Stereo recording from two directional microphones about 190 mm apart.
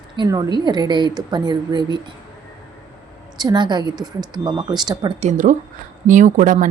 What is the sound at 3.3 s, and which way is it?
A woman's voice, 20° right (ahead or behind).